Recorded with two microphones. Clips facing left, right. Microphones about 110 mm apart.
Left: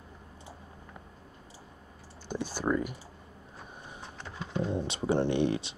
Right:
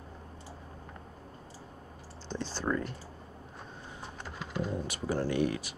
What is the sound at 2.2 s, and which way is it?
Speech, 10° left (ahead or behind).